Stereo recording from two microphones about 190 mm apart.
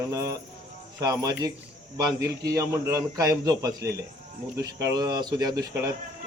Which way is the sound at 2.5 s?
15° right (ahead or behind).